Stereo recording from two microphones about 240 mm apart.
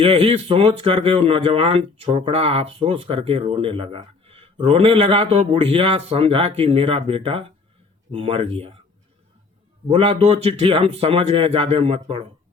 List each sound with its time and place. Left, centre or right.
0.0 s speech: right
9.9 s speech: right